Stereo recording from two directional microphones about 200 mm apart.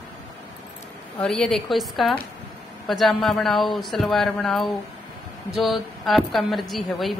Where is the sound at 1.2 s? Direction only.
Centre (ahead or behind).